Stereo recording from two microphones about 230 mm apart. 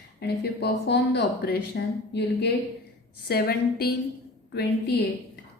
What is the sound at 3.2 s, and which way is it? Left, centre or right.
Speech, left.